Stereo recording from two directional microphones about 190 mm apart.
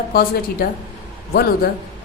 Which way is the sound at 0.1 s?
50° left (ahead or behind).